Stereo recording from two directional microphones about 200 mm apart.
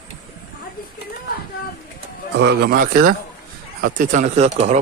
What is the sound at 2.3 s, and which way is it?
A man's voice, 55° right (ahead or behind).